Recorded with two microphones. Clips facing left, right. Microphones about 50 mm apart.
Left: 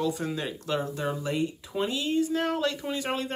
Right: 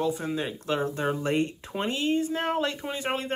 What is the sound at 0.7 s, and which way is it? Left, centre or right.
Speech, right.